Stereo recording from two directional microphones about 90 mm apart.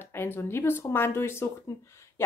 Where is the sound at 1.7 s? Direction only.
40° left (ahead or behind).